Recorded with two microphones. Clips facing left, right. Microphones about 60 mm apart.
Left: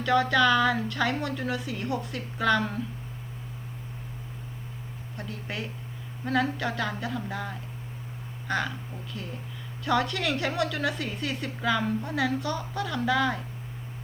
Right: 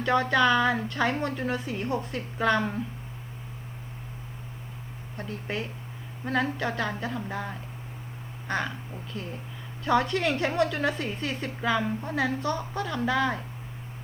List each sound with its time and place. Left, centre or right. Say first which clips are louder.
0.0 s a woman's voice: even; right
5.1 s a woman's voice: right 3 dB; right
9.8 s a woman's voice: right 2 dB; right